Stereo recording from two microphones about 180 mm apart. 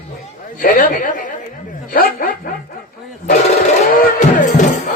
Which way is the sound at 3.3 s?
45° left (ahead or behind).